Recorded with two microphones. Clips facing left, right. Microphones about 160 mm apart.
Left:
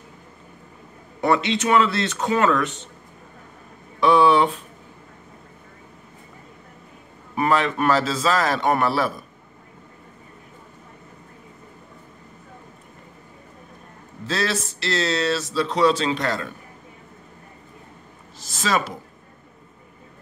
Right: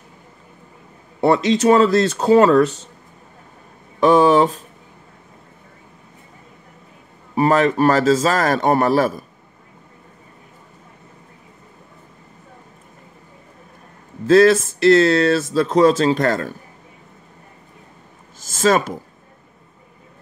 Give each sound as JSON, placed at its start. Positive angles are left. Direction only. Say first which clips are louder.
{"t": 1.2, "sound": "speech", "louder": "right 6 dB", "side_deg": -35}
{"t": 4.0, "sound": "speech", "louder": "right 4 dB", "side_deg": -40}
{"t": 7.3, "sound": "speech", "louder": "right 5 dB", "side_deg": -40}
{"t": 14.2, "sound": "speech", "louder": "right 14 dB", "side_deg": -50}
{"t": 18.4, "sound": "speech", "louder": "right 7 dB", "side_deg": -45}